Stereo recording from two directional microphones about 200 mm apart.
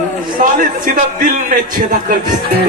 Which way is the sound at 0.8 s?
45° right (ahead or behind).